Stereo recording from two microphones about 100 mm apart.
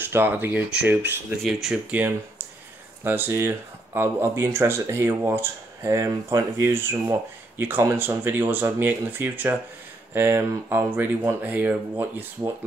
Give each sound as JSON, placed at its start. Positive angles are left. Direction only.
{"t": 0.0, "sound": "speech", "side_deg": -20}
{"t": 1.4, "sound": "speech", "side_deg": -5}
{"t": 3.0, "sound": "speech", "side_deg": -20}